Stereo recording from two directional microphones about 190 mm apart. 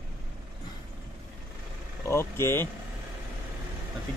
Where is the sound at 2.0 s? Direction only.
15° left (ahead or behind).